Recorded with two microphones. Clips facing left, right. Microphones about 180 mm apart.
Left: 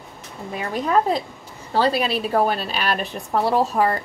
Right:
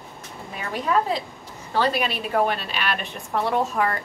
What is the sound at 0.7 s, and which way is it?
A woman's voice, 40° left (ahead or behind).